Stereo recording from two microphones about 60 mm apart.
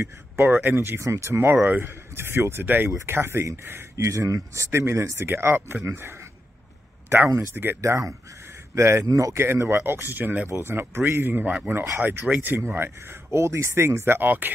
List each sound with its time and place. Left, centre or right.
0.4 s speech: right
0.7 s speech: right
3.9 s speech: right
7.3 s speech: right
7.8 s speech: right
9.5 s speech: right
10.5 s speech: right